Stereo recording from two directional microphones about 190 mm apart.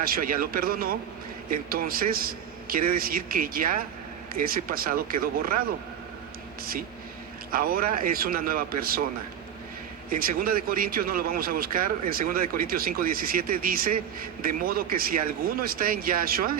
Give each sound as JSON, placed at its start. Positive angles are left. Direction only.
{"t": 0.0, "sound": "speech", "side_deg": -50}
{"t": 7.5, "sound": "speech", "side_deg": -50}
{"t": 10.1, "sound": "speech", "side_deg": -50}